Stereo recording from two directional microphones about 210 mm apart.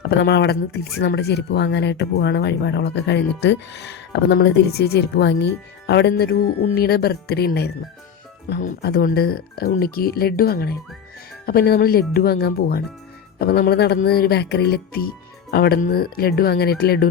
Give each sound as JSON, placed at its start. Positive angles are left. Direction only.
{"t": 0.0, "sound": "speech", "side_deg": 55}